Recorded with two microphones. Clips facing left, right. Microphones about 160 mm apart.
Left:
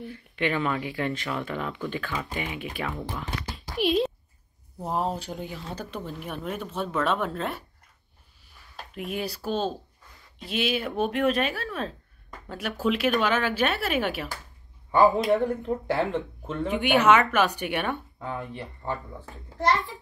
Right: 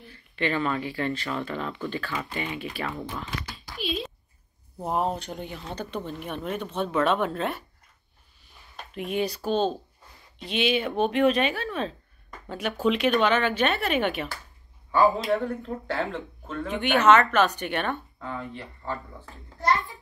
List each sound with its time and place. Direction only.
0.0 s speech: 10° left (ahead or behind)
3.6 s a sound: 75° left (ahead or behind)
4.8 s speech: centre (ahead or behind)
8.9 s speech: 5° left (ahead or behind)
15.1 s speech: 20° left (ahead or behind)